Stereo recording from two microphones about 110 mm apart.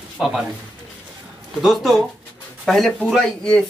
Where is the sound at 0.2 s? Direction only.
Centre (ahead or behind).